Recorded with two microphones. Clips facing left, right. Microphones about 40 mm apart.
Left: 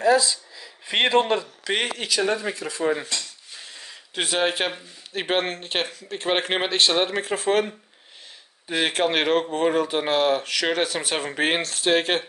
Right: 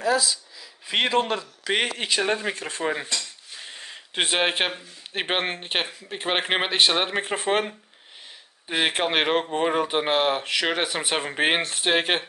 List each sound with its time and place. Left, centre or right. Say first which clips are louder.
0.9 s a man's voice: left 3 dB; left
1.6 s speech: right 1 dB; centre
2.0 s speech: left 1 dB; right
2.8 s speech: left 4 dB; right
3.6 s a sound: right 4 dB; right
5.1 s speech: left 2 dB; right
7.2 s speech: left 2 dB; right
8.6 s speech: left 1 dB; centre